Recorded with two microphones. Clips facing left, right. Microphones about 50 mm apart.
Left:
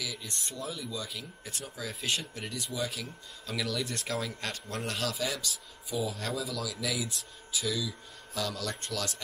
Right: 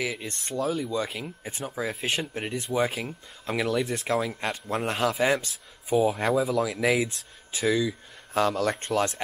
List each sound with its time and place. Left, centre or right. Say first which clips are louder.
0.0 s speech: right 8 dB; right